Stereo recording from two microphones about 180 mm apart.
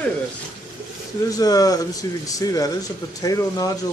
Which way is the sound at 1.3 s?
20° left (ahead or behind).